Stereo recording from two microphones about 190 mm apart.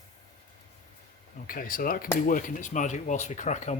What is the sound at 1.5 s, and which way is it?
Speech, 50° left (ahead or behind).